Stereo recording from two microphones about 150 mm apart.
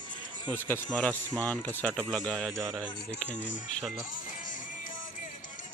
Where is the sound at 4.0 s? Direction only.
60° left (ahead or behind).